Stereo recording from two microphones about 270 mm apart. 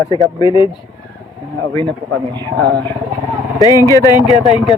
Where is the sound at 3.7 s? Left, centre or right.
Centre.